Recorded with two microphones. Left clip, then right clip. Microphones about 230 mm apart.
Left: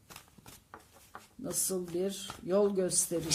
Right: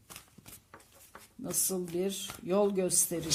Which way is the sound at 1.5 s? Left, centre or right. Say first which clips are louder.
Right 1 dB; right.